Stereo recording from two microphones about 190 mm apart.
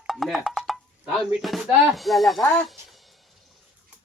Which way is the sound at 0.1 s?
Centre (ahead or behind).